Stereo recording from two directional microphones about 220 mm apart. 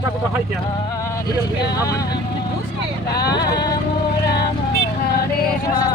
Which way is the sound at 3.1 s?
15° left (ahead or behind).